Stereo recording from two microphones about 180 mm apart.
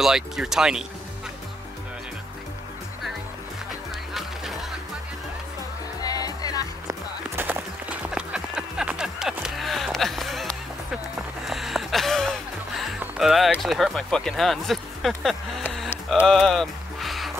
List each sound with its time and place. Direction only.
0.0 s speech: centre (ahead or behind)
4.1 s music: centre (ahead or behind)
6.0 s music: 20° left (ahead or behind)
6.9 s music: 10° right (ahead or behind)
13.0 s speech: centre (ahead or behind)
16.1 s music: centre (ahead or behind)